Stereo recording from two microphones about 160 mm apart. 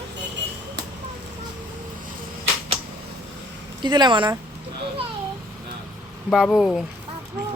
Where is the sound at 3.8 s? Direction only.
30° right (ahead or behind).